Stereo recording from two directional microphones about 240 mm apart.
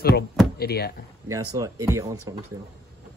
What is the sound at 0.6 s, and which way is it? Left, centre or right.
Speech, left.